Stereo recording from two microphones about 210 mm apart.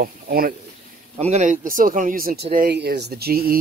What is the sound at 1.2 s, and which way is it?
Speech, 35° right (ahead or behind).